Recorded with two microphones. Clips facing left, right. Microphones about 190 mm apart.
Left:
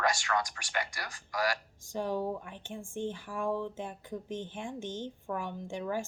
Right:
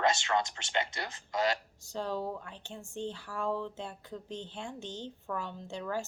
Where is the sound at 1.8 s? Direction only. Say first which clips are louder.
Left 2 dB; 15° left (ahead or behind).